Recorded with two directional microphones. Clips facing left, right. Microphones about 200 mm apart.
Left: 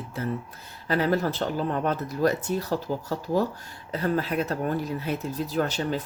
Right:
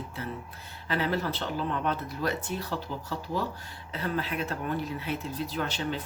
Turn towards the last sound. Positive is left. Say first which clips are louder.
# left 5 dB
turn(degrees=40)  # may be behind; listen again after turning